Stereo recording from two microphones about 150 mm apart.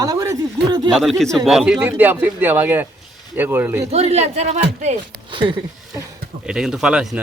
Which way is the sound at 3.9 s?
45° right (ahead or behind).